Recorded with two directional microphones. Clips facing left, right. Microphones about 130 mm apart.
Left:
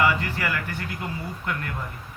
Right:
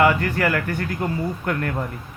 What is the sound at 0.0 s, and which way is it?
Speech, 45° right (ahead or behind).